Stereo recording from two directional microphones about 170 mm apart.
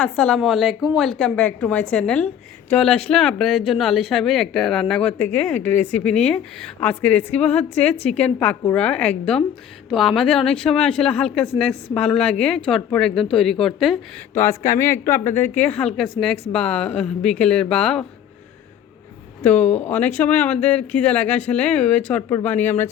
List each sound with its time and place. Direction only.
0.2 s speech: 5° left (ahead or behind)
14.3 s speech: 15° left (ahead or behind)
19.4 s speech: 10° left (ahead or behind)